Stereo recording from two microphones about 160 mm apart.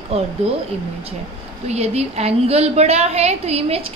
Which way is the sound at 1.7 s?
40° right (ahead or behind).